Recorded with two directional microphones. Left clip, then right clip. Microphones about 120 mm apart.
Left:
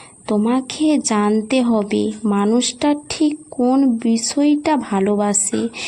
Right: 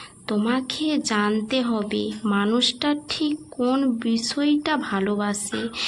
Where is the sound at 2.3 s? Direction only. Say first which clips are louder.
Left 2 dB; 55° left (ahead or behind).